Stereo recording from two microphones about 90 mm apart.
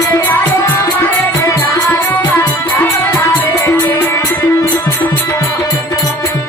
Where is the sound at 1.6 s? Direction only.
20° left (ahead or behind).